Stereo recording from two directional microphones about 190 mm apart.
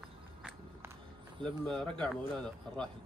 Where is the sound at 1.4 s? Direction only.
5° left (ahead or behind).